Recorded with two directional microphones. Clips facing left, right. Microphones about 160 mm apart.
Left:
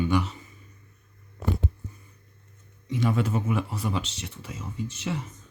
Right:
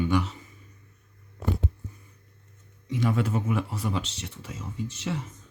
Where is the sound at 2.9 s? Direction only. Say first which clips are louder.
Left 1 dB; 25° left (ahead or behind).